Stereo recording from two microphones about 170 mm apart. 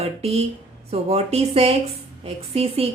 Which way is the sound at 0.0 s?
35° right (ahead or behind).